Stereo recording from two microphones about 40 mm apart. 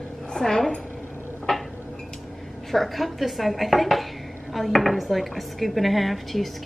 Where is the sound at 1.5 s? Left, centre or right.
Centre.